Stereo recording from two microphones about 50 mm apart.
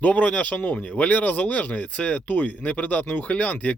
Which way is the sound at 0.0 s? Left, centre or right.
Left.